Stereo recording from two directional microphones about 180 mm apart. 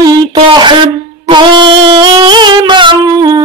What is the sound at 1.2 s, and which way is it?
Wind instrument, 25° right (ahead or behind).